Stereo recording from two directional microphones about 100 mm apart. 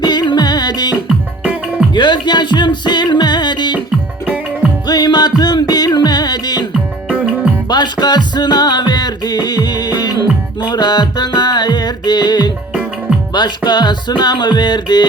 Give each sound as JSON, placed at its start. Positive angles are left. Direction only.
{"t": 0.0, "sound": "music", "side_deg": 45}
{"t": 1.0, "sound": "music", "side_deg": -10}
{"t": 1.9, "sound": "music", "side_deg": 50}
{"t": 4.9, "sound": "music", "side_deg": 45}
{"t": 7.1, "sound": "music", "side_deg": -10}
{"t": 7.7, "sound": "music", "side_deg": 45}
{"t": 13.7, "sound": "music", "side_deg": 45}